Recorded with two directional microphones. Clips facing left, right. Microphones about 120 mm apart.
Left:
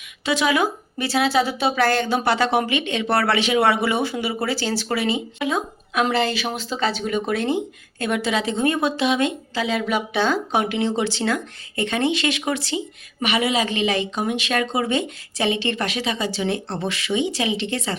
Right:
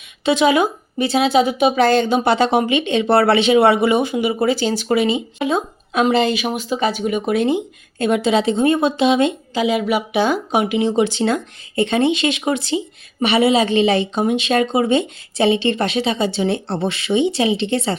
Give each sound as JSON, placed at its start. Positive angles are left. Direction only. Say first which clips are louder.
{"t": 0.3, "sound": "speech", "louder": "right 5 dB", "side_deg": -25}